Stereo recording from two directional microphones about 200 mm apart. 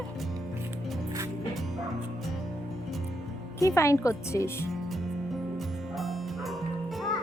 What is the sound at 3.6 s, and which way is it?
Speech, 15° left (ahead or behind).